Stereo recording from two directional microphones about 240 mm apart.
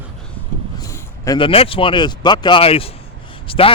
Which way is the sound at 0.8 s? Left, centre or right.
Centre.